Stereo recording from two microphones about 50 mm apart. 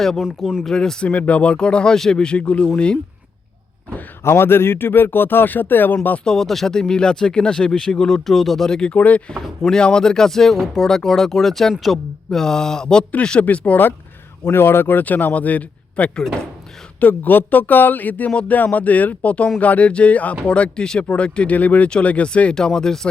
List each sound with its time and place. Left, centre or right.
0.2 s speech: centre
0.6 s speech: centre
1.1 s speech: left
4.2 s speech: left
6.2 s speech: centre
8.9 s speech: left
9.6 s speech: centre
13.4 s speech: left
14.4 s speech: left
15.0 s speech: left; by 23.0 s centre